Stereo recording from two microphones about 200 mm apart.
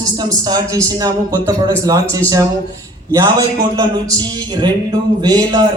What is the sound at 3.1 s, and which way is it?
Speech, 15° right (ahead or behind).